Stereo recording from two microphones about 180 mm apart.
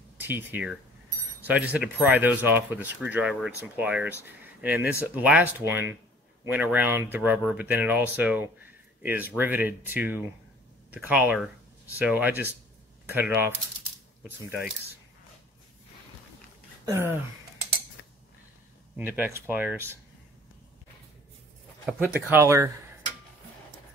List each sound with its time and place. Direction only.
0.2 s speech: 10° right (ahead or behind)
16.8 s speech: 15° right (ahead or behind)
18.0 s a sound: 70° left (ahead or behind)
18.9 s speech: 10° right (ahead or behind)
21.8 s speech: 10° right (ahead or behind)